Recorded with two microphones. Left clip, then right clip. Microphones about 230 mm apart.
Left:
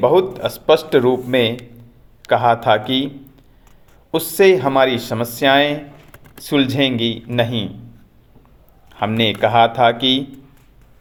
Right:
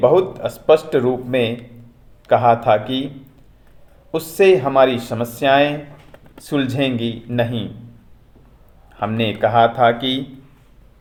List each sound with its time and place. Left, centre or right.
0.0 s speech: left
4.1 s speech: left
8.9 s speech: left
10.0 s a man's voice: left